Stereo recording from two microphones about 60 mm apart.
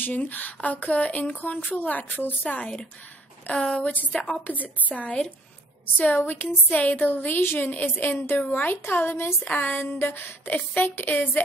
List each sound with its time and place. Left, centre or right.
0.0 s speech: left
6.2 s a woman's voice: left
8.8 s a woman's voice: left
9.4 s a woman's voice: left